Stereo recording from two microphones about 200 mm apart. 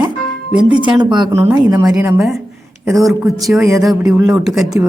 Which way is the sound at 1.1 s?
15° right (ahead or behind).